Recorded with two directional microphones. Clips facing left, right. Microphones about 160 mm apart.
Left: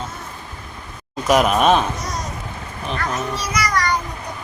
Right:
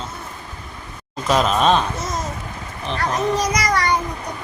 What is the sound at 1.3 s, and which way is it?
Speech, 10° left (ahead or behind).